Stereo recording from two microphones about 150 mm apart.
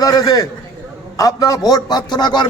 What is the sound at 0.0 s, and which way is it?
A man's voice, 25° left (ahead or behind).